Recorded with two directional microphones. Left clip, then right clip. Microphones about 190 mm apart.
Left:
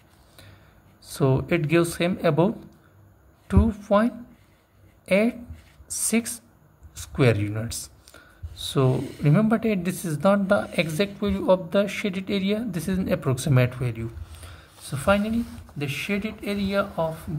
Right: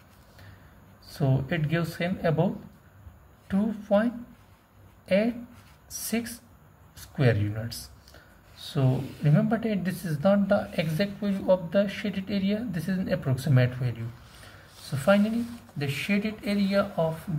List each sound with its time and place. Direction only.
1.1 s a man's voice: 35° left (ahead or behind)
14.9 s speech: 20° left (ahead or behind)